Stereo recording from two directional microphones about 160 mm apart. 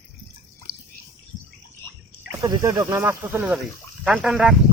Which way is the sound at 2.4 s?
20° right (ahead or behind).